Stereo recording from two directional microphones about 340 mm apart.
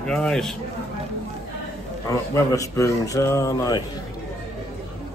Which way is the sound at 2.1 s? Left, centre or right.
Centre.